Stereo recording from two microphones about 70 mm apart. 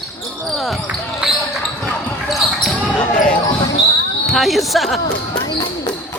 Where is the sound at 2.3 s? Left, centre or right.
Centre.